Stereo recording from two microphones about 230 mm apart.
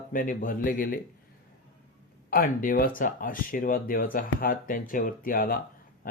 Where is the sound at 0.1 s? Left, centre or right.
Left.